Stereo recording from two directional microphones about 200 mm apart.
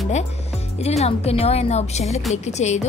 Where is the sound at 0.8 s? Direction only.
30° left (ahead or behind).